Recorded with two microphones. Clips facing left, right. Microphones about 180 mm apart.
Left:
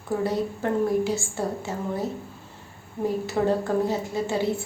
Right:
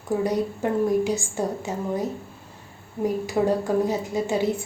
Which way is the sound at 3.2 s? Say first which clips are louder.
Right 1 dB; 15° right (ahead or behind).